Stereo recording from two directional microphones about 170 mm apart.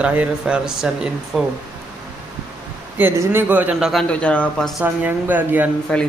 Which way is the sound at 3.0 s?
15° right (ahead or behind).